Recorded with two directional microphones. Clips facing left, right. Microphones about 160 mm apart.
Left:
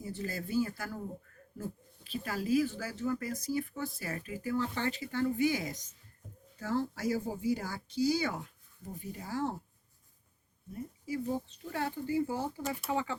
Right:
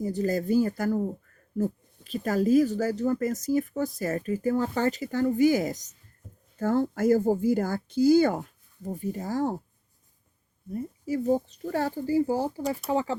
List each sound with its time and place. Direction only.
0.0 s speech: 40° right (ahead or behind)
10.7 s speech: 40° right (ahead or behind)